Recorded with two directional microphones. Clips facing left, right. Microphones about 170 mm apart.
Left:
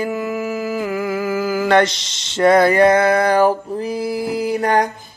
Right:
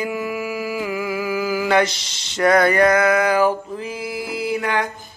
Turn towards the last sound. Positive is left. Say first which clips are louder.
# left 5 dB
turn(degrees=40)  # may be behind; listen again after turning